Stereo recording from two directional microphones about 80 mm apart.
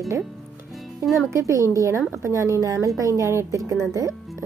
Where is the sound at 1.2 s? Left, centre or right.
Right.